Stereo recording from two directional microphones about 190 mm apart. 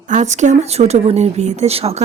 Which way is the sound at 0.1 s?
40° right (ahead or behind).